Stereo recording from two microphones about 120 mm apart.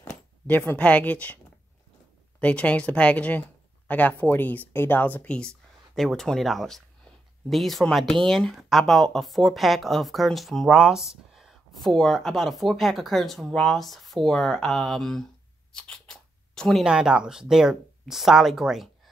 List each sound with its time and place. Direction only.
0.5 s speech: 15° left (ahead or behind)
2.4 s speech: 10° left (ahead or behind)
15.7 s a sound: 5° left (ahead or behind)
16.8 s speech: 5° right (ahead or behind)